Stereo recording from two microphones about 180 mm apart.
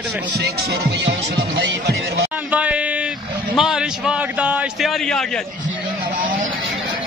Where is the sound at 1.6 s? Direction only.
70° right (ahead or behind).